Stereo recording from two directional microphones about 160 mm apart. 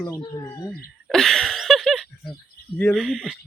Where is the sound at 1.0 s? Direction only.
5° left (ahead or behind).